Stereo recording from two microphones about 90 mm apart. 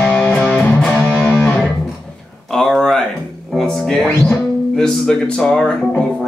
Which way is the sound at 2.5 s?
5° left (ahead or behind).